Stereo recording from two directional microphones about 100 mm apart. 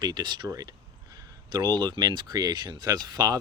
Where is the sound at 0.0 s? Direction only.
45° right (ahead or behind).